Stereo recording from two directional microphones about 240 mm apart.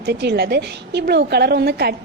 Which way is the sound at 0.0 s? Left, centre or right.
Right.